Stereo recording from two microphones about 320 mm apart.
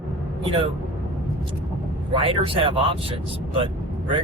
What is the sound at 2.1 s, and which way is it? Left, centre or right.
Speech, centre.